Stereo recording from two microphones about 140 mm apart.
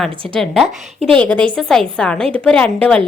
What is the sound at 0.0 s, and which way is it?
A woman's voice, centre (ahead or behind).